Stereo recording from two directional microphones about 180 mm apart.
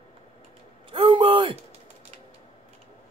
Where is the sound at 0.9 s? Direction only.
30° right (ahead or behind).